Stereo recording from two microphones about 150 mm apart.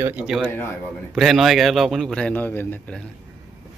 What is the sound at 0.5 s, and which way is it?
Speech, 15° left (ahead or behind).